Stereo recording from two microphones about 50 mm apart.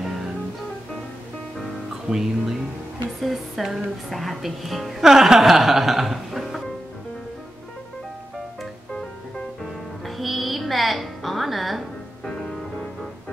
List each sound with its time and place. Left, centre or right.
2.0 s speech: centre
10.0 s music: centre